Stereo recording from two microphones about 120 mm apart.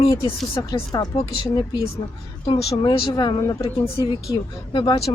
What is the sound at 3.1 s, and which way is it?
Speech, 35° left (ahead or behind).